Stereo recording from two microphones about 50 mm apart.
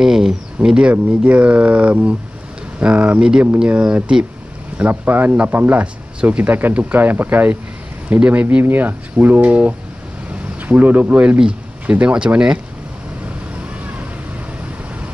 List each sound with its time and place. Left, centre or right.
0.0 s speech: centre
0.6 s speech: right
4.7 s speech: right
6.7 s speech: right
7.0 s speech: right
12.1 s speech: centre